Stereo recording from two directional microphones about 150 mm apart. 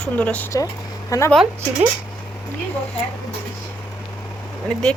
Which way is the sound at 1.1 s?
20° left (ahead or behind).